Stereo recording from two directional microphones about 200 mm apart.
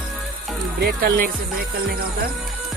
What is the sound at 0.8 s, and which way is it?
Speech, 45° right (ahead or behind).